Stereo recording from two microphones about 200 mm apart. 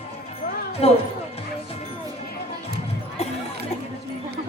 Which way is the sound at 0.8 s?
30° left (ahead or behind).